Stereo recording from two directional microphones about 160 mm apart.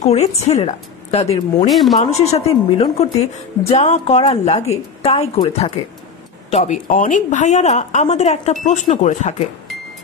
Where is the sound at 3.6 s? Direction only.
40° left (ahead or behind).